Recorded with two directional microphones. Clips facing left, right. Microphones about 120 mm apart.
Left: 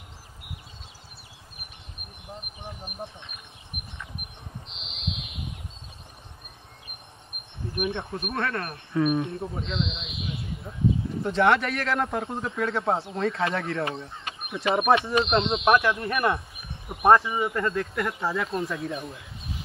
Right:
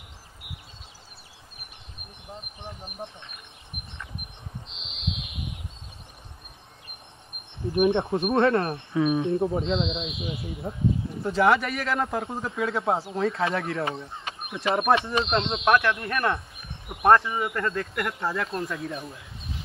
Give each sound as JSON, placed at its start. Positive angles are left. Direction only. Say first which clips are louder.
{"t": 2.6, "sound": "speech", "louder": "even", "side_deg": 10}
{"t": 7.7, "sound": "speech", "louder": "right 8 dB", "side_deg": -30}
{"t": 9.0, "sound": "speech", "louder": "right 1 dB", "side_deg": 0}
{"t": 9.4, "sound": "speech", "louder": "right 6 dB", "side_deg": -30}
{"t": 11.2, "sound": "speech", "louder": "even", "side_deg": 0}